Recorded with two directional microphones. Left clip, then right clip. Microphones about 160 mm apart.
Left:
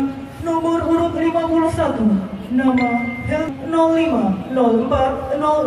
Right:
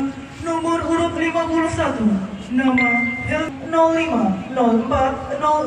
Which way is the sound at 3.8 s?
90° left.